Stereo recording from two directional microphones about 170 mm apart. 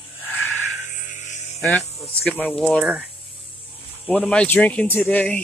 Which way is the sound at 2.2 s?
5° left (ahead or behind).